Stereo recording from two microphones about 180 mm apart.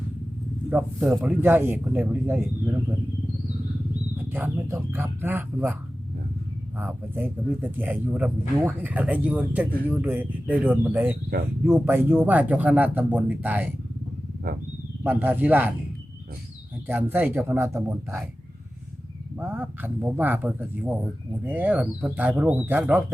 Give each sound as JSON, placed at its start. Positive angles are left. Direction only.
{"t": 0.7, "sound": "speech", "side_deg": -5}
{"t": 4.2, "sound": "speech", "side_deg": -10}
{"t": 6.7, "sound": "speech", "side_deg": -10}
{"t": 14.5, "sound": "speech", "side_deg": -55}
{"t": 15.0, "sound": "speech", "side_deg": -10}
{"t": 16.8, "sound": "speech", "side_deg": -10}
{"t": 19.4, "sound": "speech", "side_deg": -10}